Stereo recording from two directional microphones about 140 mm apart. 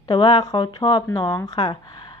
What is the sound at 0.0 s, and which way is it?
Speech, 35° left (ahead or behind).